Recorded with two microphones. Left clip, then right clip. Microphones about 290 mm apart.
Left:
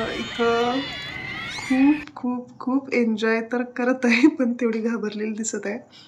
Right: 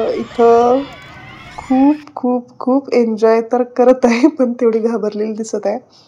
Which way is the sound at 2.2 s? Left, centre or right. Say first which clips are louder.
Right 12 dB; centre.